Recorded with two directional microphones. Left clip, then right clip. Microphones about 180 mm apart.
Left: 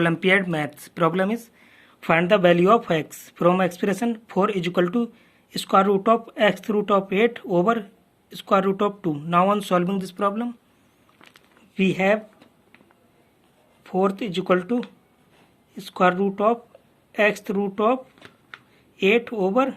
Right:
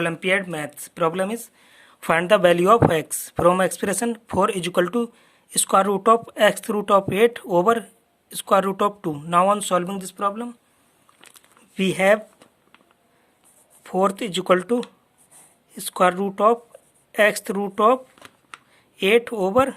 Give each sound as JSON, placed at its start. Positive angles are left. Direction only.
{"t": 0.0, "sound": "speech", "side_deg": -10}
{"t": 11.7, "sound": "speech", "side_deg": -40}
{"t": 13.8, "sound": "speech", "side_deg": -45}